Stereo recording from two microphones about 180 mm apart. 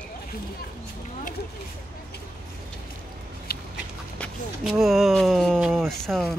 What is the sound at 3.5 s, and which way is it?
Dog, 60° left (ahead or behind).